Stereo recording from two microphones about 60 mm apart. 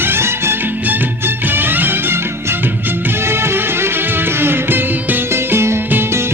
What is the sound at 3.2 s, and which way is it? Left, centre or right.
Music, right.